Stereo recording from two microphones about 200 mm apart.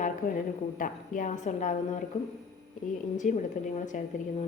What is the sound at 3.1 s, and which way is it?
Speech, 40° left (ahead or behind).